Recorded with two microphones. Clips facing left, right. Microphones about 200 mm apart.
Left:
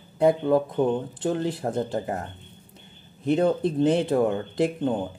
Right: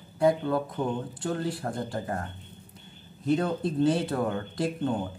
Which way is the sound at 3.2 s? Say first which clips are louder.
Left 5 dB; 25° left (ahead or behind).